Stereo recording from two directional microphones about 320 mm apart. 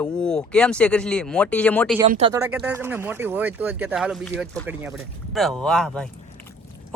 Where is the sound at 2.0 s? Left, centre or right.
Centre.